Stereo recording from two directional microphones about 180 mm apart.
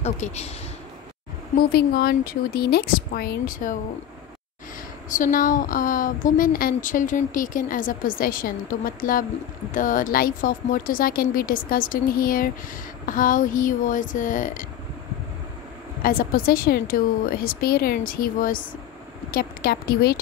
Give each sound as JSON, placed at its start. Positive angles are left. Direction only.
{"t": 0.0, "sound": "speech", "side_deg": 40}
{"t": 1.6, "sound": "a woman's voice", "side_deg": 55}
{"t": 5.1, "sound": "a woman's voice", "side_deg": 50}
{"t": 16.0, "sound": "a woman's voice", "side_deg": 50}